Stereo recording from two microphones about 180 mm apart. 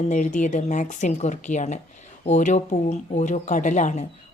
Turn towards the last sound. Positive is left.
turn(degrees=45)  # may be behind; listen again after turning